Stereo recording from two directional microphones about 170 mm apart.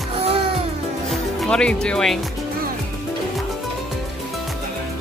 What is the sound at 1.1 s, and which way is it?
Speech, 5° left (ahead or behind).